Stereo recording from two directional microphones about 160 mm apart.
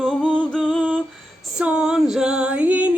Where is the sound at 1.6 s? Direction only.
5° right (ahead or behind).